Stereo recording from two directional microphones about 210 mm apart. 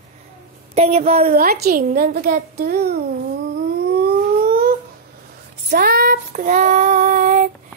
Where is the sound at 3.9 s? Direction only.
45° right (ahead or behind).